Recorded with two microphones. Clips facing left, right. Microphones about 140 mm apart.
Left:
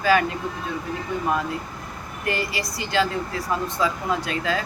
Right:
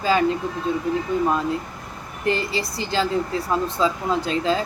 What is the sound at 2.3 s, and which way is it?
Speech, 25° right (ahead or behind).